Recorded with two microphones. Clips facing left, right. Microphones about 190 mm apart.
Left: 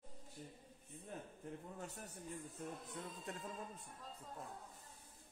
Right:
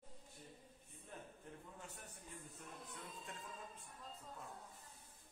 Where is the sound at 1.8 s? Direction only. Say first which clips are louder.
Left 6 dB; 40° left (ahead or behind).